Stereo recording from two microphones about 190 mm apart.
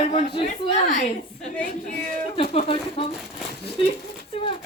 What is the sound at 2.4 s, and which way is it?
Speech, 30° left (ahead or behind).